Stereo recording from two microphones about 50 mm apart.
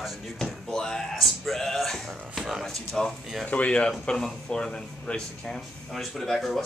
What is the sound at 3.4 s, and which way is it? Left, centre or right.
Speech, left.